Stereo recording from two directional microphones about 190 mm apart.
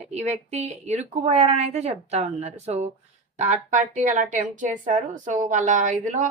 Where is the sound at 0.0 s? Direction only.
35° right (ahead or behind).